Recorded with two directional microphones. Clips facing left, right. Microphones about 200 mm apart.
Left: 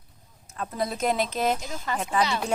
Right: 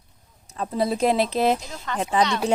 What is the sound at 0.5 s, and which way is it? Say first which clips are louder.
Speech: right 6 dB; 30° right (ahead or behind).